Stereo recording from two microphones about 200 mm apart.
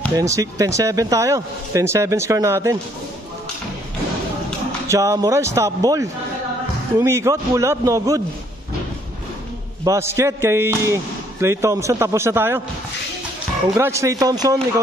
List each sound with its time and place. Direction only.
0.1 s speech: 15° right (ahead or behind)
4.8 s speech: 15° right (ahead or behind)
9.8 s speech: 15° right (ahead or behind)
13.7 s speech: 15° right (ahead or behind)